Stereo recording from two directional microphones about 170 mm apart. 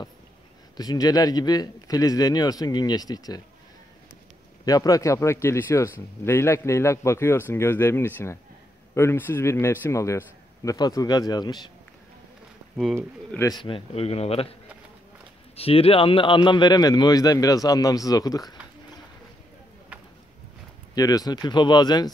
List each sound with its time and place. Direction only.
0.7 s a man's voice: 20° left (ahead or behind)
4.6 s speech: 20° left (ahead or behind)
12.8 s speech: centre (ahead or behind)
13.4 s speech: 25° left (ahead or behind)
15.5 s a man's voice: 35° left (ahead or behind)
20.9 s a man's voice: 20° left (ahead or behind)